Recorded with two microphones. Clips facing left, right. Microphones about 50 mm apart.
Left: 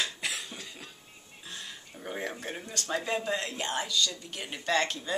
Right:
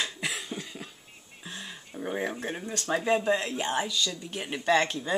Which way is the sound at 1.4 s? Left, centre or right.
Centre.